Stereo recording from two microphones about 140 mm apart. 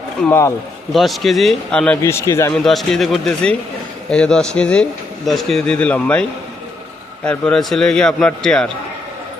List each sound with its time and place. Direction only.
0.3 s speech: 20° left (ahead or behind)
0.9 s a man's voice: centre (ahead or behind)
2.0 s speech: 20° left (ahead or behind)
2.5 s a man's voice: centre (ahead or behind)
7.3 s a man's voice: 5° left (ahead or behind)